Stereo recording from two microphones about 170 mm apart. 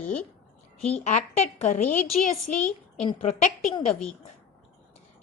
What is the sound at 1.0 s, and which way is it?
A woman's voice, 40° left (ahead or behind).